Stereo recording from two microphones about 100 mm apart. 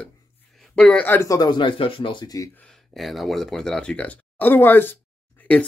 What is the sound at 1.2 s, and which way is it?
Speech, 40° left (ahead or behind).